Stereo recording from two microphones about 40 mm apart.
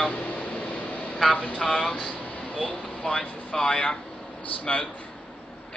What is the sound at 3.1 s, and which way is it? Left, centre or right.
Speech, left.